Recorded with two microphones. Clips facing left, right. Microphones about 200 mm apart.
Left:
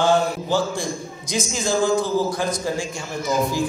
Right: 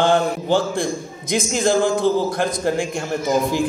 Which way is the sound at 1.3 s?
55° right (ahead or behind).